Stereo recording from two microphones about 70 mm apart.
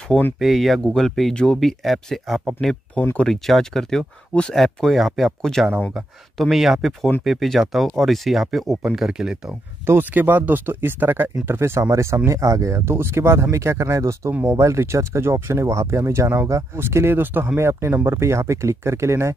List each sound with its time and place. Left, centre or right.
0.4 s speech: centre
3.0 s speech: left
3.3 s speech: centre
9.8 s speech: right
14.3 s speech: right
14.6 s speech: right